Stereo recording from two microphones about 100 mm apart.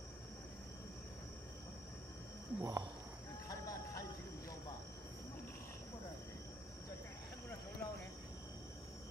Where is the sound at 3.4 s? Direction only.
35° left (ahead or behind).